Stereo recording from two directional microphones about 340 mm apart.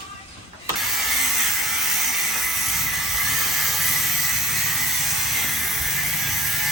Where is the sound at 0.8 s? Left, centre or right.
Centre.